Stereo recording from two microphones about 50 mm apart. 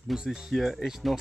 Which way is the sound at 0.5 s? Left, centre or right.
Centre.